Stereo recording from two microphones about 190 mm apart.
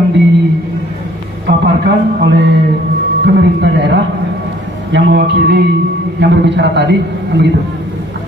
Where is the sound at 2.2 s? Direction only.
65° right (ahead or behind).